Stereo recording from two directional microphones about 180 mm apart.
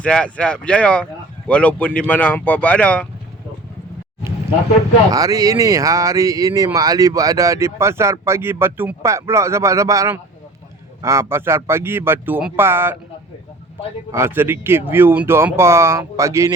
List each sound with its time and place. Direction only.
0.0 s speech: 5° left (ahead or behind)
5.1 s speech: 20° right (ahead or behind)
14.1 s speech: 15° right (ahead or behind)